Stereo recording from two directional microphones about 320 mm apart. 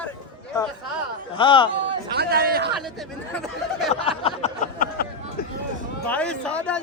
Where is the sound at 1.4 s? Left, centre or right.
Centre.